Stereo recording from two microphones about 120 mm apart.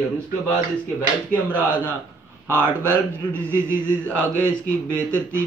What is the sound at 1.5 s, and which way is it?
Speech, 15° right (ahead or behind).